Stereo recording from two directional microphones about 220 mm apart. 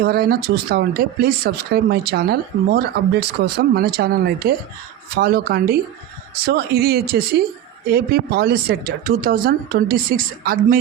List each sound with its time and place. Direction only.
0.0 s speech: 45° right (ahead or behind)